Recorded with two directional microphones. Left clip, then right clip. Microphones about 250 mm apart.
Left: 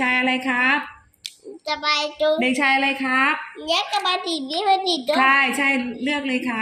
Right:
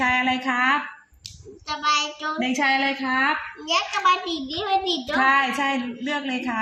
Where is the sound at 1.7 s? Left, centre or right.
Right.